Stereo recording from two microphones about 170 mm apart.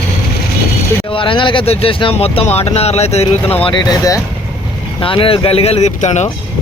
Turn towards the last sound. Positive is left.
turn(degrees=45)  # may be behind; listen again after turning